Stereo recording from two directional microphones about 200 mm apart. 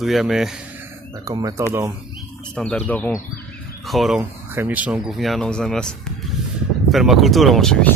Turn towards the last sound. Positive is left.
turn(degrees=5)  # may be behind; listen again after turning